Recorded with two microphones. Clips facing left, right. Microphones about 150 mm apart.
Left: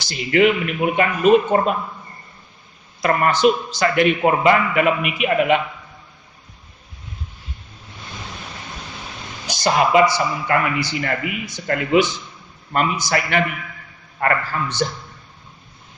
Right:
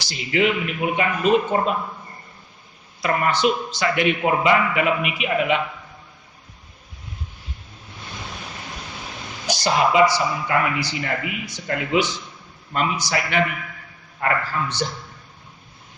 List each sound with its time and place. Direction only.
0.0 s a man's voice: 55° left (ahead or behind)
3.0 s a man's voice: 50° left (ahead or behind)
9.6 s a man's voice: 55° left (ahead or behind)